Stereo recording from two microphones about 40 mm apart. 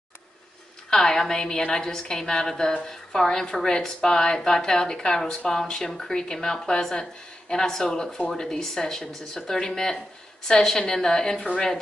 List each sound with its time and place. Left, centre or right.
0.8 s speech: centre